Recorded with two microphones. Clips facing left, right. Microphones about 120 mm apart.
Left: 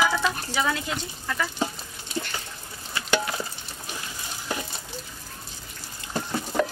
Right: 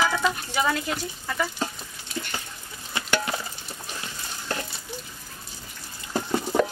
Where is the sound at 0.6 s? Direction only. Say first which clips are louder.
Right 2 dB; 5° right (ahead or behind).